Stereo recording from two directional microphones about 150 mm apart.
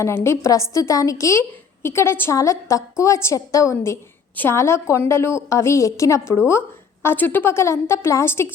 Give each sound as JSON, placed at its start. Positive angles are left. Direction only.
{"t": 0.0, "sound": "a woman's voice", "side_deg": 20}